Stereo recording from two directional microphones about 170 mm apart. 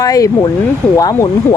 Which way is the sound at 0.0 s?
20° left (ahead or behind).